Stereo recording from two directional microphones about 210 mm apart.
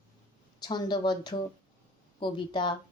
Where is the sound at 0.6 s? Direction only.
20° left (ahead or behind).